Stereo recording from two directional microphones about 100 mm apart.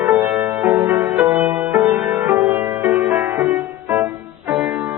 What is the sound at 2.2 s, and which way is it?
Music, 30° right (ahead or behind).